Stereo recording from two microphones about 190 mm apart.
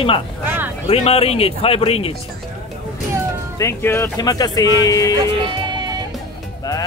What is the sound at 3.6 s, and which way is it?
Speech, 15° left (ahead or behind).